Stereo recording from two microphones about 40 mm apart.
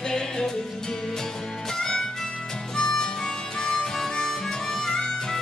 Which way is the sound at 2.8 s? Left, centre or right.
Centre.